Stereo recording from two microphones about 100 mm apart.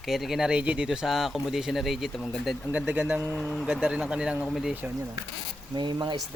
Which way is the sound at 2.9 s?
15° right (ahead or behind).